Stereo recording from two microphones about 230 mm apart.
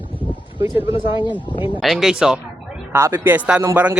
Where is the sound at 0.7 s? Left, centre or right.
Left.